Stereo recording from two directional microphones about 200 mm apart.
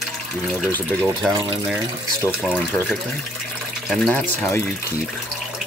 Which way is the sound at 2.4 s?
Centre (ahead or behind).